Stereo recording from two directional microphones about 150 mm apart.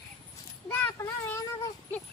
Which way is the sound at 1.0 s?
20° left (ahead or behind).